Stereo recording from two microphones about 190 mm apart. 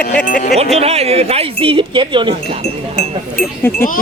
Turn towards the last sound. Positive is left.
turn(degrees=45)  # may be behind; listen again after turning